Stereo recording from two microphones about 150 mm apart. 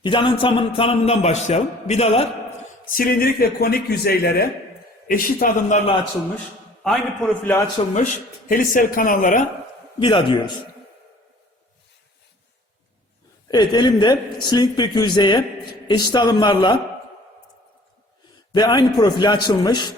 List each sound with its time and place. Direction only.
0.0 s a man's voice: 30° left (ahead or behind)
2.9 s a man's voice: 75° left (ahead or behind); by 4.4 s 90° left
5.0 s a man's voice: 70° left (ahead or behind)
6.8 s a man's voice: 5° left (ahead or behind)
7.8 s a man's voice: 35° left (ahead or behind)
8.4 s speech: 70° left (ahead or behind)
10.0 s a man's voice: 35° left (ahead or behind)
13.5 s a man's voice: 30° left (ahead or behind)
18.5 s a man's voice: 25° left (ahead or behind)